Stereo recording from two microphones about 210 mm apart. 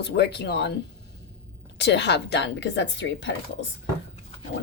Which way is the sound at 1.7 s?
55° left (ahead or behind).